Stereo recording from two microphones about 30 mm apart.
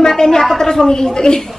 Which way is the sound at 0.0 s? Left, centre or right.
Left.